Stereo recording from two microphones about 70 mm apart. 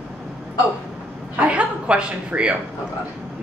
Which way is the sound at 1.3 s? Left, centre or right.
Centre.